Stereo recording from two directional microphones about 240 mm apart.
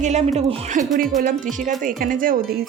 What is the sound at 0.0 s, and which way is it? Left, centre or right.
Speech, right.